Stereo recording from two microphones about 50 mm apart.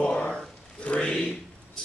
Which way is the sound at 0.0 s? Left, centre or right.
Left.